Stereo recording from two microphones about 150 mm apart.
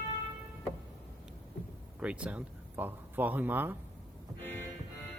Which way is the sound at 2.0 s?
10° right (ahead or behind).